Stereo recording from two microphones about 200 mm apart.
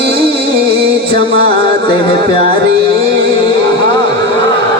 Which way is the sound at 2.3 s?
55° right (ahead or behind).